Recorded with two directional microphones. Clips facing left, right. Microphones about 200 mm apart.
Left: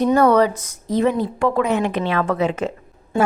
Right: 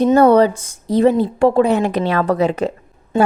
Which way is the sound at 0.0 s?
30° right (ahead or behind).